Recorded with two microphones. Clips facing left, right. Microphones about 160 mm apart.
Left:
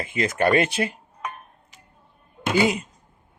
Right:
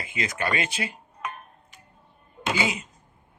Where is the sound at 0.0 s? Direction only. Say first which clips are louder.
Left 8 dB; 50° left (ahead or behind).